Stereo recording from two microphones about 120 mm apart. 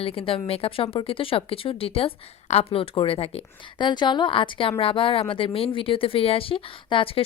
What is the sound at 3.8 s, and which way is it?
A woman's voice, 40° left (ahead or behind).